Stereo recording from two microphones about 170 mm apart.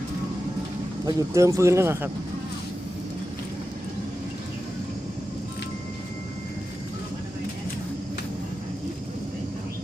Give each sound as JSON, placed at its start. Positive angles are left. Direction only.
{"t": 1.0, "sound": "speech", "side_deg": -15}